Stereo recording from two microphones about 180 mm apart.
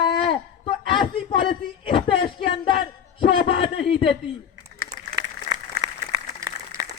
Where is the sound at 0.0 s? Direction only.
30° left (ahead or behind).